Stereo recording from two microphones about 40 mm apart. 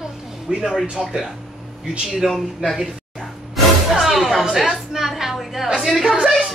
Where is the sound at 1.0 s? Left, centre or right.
Centre.